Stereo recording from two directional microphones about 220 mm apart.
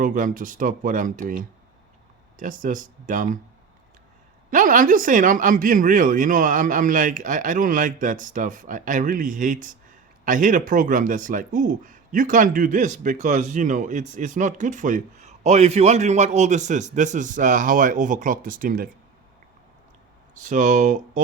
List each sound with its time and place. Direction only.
0.0 s speech: 35° right (ahead or behind)
4.5 s speech: 35° right (ahead or behind)
20.4 s speech: 35° right (ahead or behind)